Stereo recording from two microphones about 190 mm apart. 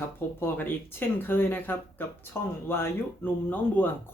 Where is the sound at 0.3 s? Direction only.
10° left (ahead or behind).